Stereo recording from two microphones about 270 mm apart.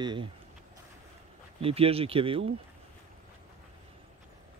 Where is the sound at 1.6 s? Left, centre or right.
Right.